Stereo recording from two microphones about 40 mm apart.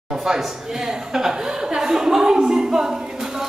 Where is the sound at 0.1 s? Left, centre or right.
Centre.